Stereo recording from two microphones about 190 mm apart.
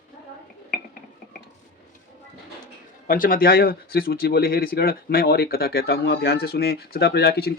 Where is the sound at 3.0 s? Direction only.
50° left (ahead or behind).